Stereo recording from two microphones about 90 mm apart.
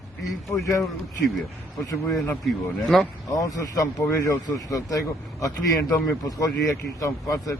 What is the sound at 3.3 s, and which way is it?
Speech, 40° left (ahead or behind).